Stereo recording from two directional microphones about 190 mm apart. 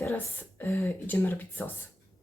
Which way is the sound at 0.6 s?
10° left (ahead or behind).